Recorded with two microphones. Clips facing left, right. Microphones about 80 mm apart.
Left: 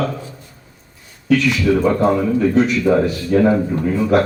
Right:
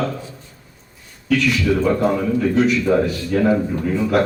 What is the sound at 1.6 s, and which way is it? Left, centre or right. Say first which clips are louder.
Speech: left 2 dB; centre.